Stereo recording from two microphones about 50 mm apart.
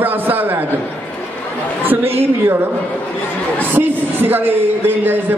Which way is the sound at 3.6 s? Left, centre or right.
Right.